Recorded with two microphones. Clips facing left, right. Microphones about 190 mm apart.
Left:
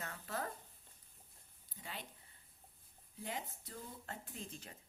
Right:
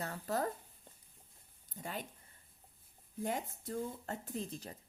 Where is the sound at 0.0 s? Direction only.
35° right (ahead or behind).